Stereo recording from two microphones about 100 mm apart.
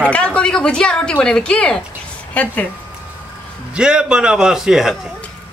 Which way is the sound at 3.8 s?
10° right (ahead or behind).